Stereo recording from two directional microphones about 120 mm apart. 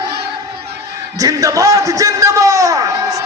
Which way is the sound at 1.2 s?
30° right (ahead or behind).